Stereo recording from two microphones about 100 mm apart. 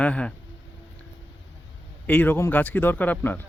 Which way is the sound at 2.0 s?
15° left (ahead or behind).